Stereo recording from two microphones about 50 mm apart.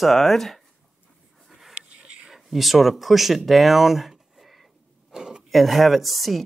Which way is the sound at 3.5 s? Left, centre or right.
Centre.